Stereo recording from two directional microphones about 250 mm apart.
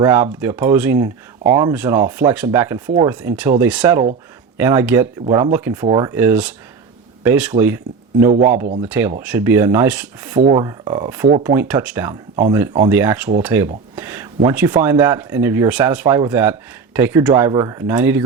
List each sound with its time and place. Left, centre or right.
0.3 s speech: centre
1.5 s speech: right
1.7 s speech: centre
2.8 s speech: right
3.1 s speech: centre
5.2 s speech: right
5.5 s speech: centre
8.2 s speech: right
8.9 s speech: centre